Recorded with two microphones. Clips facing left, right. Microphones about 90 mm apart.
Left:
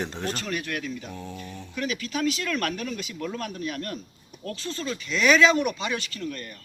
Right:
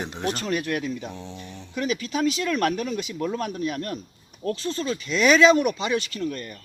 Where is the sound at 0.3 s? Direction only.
30° right (ahead or behind).